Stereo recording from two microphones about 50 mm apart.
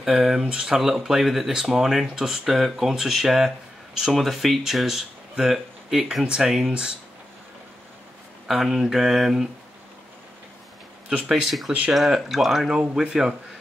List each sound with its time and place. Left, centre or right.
0.0 s speech: centre
0.7 s speech: centre
8.5 s speech: centre
11.2 s speech: centre